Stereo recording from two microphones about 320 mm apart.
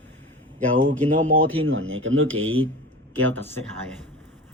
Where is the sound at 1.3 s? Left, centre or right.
Right.